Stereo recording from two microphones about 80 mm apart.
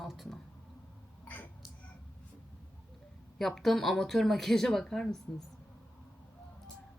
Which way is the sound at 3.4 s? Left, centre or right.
Centre.